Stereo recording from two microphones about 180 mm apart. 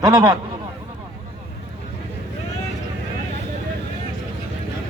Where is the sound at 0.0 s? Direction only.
20° right (ahead or behind).